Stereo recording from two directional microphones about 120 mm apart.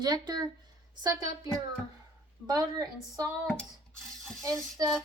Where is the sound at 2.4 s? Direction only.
30° right (ahead or behind).